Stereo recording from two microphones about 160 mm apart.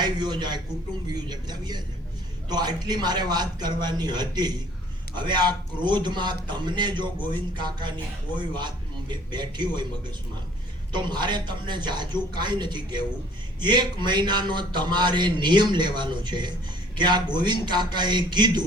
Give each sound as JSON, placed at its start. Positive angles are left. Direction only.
{"t": 0.0, "sound": "a man's voice", "side_deg": -25}
{"t": 10.9, "sound": "a man's voice", "side_deg": -25}